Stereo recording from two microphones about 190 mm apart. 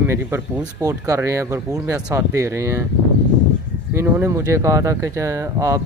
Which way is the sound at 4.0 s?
15° right (ahead or behind).